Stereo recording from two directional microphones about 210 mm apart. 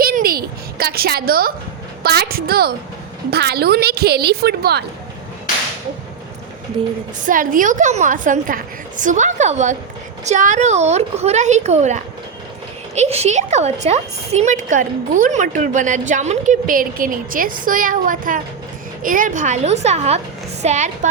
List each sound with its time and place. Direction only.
0.0 s a sound: 45° right (ahead or behind)
2.0 s a woman's voice: 45° right (ahead or behind)
7.3 s a woman's voice: 40° right (ahead or behind)